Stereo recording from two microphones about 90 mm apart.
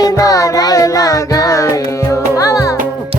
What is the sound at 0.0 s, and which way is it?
Music, 40° left (ahead or behind).